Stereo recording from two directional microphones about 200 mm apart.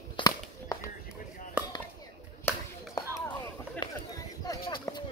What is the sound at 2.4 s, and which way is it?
Chop, 15° left (ahead or behind).